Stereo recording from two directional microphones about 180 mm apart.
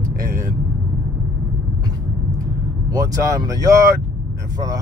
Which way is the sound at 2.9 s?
20° right (ahead or behind).